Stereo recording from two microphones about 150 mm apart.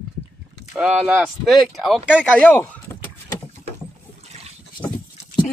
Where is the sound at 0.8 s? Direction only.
5° right (ahead or behind).